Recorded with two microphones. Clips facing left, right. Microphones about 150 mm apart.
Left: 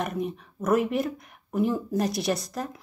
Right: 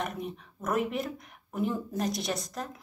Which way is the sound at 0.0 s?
5° left (ahead or behind).